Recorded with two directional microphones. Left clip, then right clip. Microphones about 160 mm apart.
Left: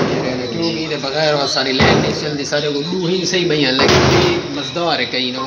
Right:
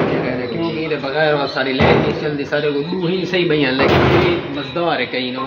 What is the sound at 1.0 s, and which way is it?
Speech, 25° left (ahead or behind).